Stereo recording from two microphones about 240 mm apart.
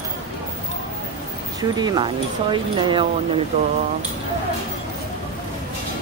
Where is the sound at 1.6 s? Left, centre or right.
Centre.